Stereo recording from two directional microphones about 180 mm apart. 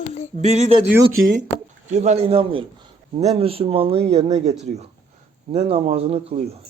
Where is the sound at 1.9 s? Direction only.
40° right (ahead or behind).